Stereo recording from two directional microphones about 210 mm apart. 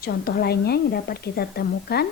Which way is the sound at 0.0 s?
45° left (ahead or behind).